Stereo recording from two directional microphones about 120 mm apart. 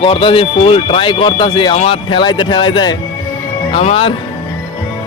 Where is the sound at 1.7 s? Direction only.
55° left (ahead or behind); by 2.9 s 40° left (ahead or behind).